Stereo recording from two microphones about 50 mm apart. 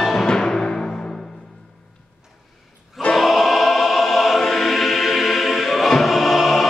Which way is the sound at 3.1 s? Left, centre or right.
Centre.